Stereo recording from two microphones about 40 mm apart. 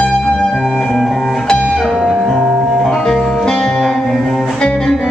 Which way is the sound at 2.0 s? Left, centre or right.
Centre.